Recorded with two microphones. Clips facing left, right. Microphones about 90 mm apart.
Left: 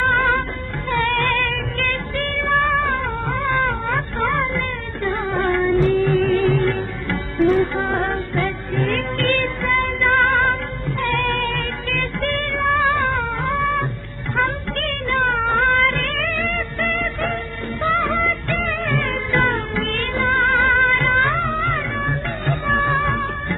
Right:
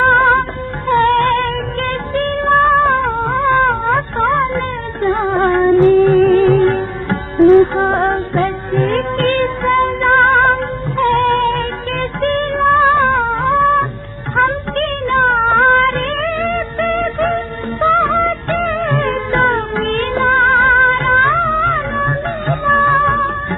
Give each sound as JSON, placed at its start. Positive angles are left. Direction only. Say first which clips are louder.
{"t": 0.0, "sound": "music", "louder": "right 7 dB", "side_deg": -40}